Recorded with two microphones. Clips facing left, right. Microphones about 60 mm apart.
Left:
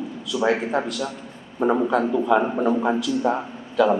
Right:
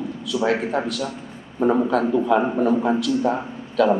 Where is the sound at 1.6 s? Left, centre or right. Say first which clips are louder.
Right 1 dB; left.